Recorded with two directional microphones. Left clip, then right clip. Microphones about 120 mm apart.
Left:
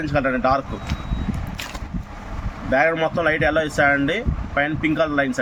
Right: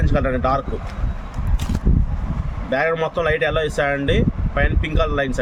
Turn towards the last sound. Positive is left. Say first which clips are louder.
# left 1 dB
turn(degrees=-30)  # may be behind; listen again after turning